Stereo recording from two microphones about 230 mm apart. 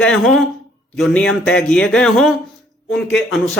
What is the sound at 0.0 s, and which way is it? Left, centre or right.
A man's voice, centre.